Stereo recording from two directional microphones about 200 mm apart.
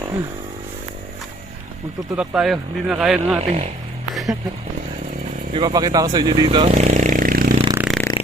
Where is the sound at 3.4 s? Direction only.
35° right (ahead or behind).